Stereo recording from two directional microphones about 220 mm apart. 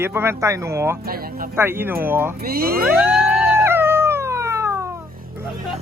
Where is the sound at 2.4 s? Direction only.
45° right (ahead or behind).